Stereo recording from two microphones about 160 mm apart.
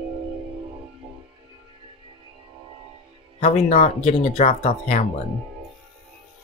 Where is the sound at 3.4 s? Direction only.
45° left (ahead or behind).